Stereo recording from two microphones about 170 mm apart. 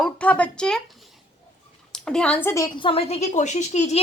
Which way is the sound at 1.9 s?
5° left (ahead or behind).